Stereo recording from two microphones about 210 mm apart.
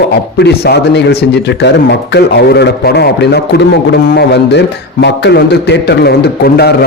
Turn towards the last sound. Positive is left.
turn(degrees=50)  # may be behind; listen again after turning